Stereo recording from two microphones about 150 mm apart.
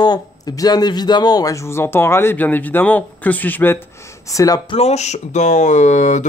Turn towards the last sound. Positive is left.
turn(degrees=55)  # may be behind; listen again after turning